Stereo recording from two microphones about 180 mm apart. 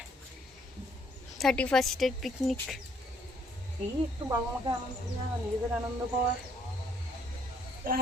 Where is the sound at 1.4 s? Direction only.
5° left (ahead or behind).